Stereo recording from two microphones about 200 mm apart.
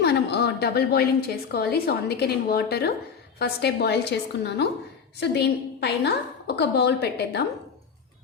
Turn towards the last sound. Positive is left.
turn(degrees=60)  # may be behind; listen again after turning